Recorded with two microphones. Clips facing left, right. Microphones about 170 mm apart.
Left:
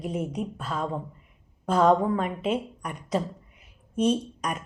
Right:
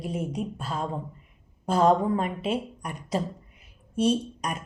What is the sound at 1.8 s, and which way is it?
Speech, 35° right (ahead or behind).